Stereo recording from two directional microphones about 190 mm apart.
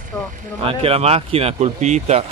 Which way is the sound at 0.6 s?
30° right (ahead or behind).